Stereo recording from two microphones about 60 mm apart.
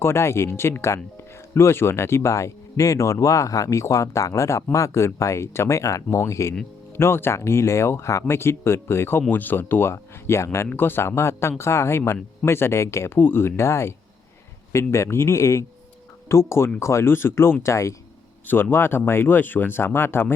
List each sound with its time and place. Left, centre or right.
0.0 s speech: left
6.9 s speech: left
9.9 s speech: left
10.8 s speech: left
13.1 s speech: left
17.6 s speech: left
18.4 s speech: left